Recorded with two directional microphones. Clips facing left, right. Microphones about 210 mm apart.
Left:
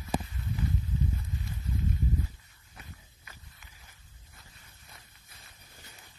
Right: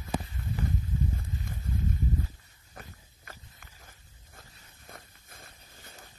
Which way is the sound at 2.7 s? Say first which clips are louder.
Right 3 dB; 45° right (ahead or behind).